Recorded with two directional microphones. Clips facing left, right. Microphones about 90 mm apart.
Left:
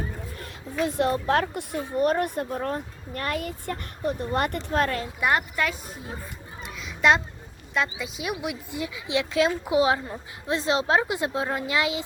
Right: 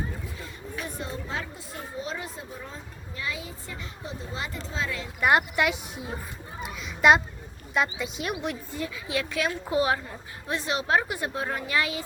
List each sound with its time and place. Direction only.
0.3 s speech: 80° left; by 5.0 s 55° left (ahead or behind)
6.6 s children playing: centre (ahead or behind)
7.7 s a woman's voice: centre (ahead or behind); by 12.0 s 20° left (ahead or behind)